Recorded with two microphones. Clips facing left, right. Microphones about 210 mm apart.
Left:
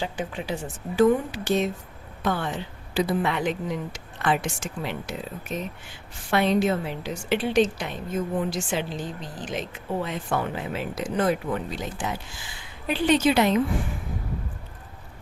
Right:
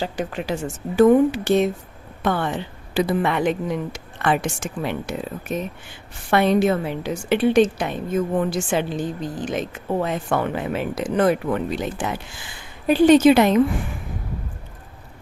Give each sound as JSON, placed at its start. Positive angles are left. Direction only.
{"t": 0.3, "sound": "speech", "side_deg": -75}
{"t": 0.6, "sound": "a woman's voice", "side_deg": -50}
{"t": 10.2, "sound": "speech", "side_deg": -65}
{"t": 12.9, "sound": "a woman's voice", "side_deg": -45}